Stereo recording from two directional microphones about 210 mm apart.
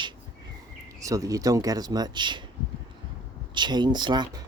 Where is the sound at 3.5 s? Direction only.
20° right (ahead or behind).